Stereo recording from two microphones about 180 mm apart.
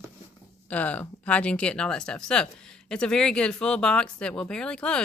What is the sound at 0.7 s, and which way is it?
A woman's voice, 10° left (ahead or behind).